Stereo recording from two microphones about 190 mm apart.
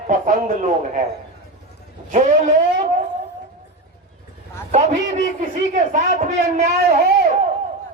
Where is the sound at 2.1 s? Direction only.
40° right (ahead or behind).